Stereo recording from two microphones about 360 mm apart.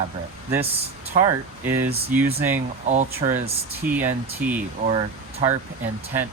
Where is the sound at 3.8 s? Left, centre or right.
Centre.